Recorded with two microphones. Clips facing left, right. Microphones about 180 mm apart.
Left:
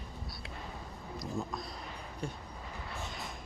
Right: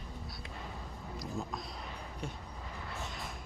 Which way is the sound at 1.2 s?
Centre (ahead or behind).